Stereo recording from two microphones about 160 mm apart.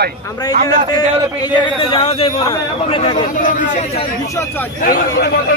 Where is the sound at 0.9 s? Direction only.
25° left (ahead or behind).